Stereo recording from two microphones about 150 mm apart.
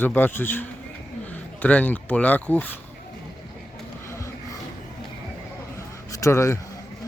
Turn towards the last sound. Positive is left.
turn(degrees=20)  # may be behind; listen again after turning